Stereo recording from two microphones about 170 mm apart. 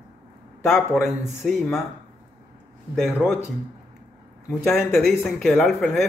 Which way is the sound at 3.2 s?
10° left (ahead or behind).